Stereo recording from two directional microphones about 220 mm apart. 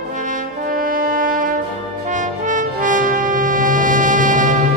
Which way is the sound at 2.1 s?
35° right (ahead or behind).